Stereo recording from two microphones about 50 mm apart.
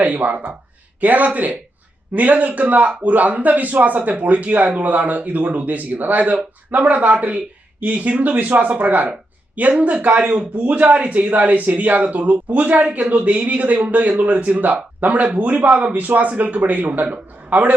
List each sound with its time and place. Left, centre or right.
0.0 s a man's voice: right